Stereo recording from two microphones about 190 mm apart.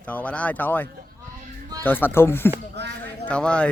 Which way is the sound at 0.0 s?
5° left (ahead or behind).